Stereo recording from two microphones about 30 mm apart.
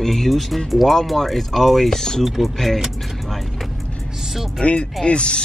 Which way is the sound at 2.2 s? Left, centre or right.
Centre.